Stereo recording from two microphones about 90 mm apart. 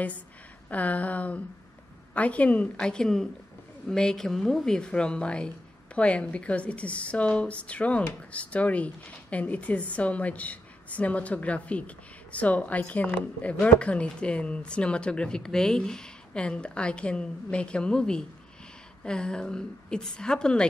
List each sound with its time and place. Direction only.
0.7 s a woman's voice: 15° left (ahead or behind)